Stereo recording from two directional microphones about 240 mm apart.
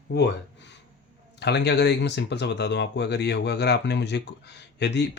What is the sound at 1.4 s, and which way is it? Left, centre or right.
Speech, left.